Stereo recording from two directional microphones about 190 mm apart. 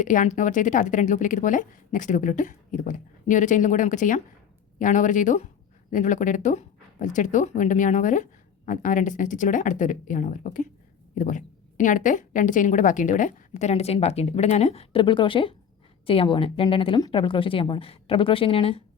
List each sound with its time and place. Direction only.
0.0 s speech: 40° left (ahead or behind)